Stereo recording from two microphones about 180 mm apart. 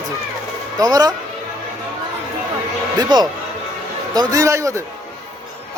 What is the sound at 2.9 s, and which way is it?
A man's voice, 20° right (ahead or behind).